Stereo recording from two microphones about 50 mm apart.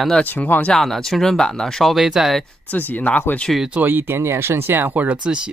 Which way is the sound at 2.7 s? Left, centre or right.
Left.